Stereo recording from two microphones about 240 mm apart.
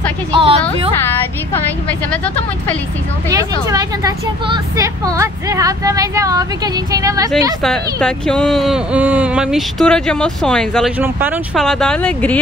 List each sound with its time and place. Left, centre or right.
0.3 s a woman's voice: right
3.3 s speech: centre
7.6 s speech: centre
11.0 s speech: centre